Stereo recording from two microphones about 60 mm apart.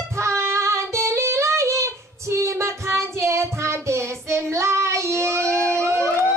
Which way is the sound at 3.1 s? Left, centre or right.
Right.